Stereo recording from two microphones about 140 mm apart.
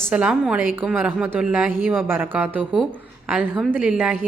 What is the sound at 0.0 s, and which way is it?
Speech, 10° right (ahead or behind).